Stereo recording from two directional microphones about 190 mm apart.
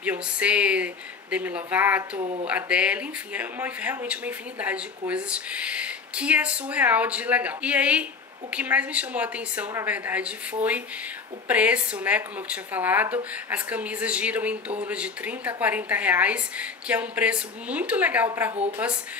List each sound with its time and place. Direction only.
0.0 s speech: 5° right (ahead or behind)
2.1 s speech: 30° right (ahead or behind)
2.4 s speech: 5° right (ahead or behind)